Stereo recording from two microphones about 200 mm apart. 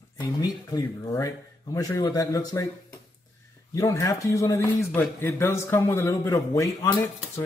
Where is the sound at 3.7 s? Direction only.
15° left (ahead or behind).